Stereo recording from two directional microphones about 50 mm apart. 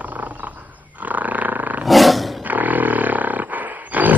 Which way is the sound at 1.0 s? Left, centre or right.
Right.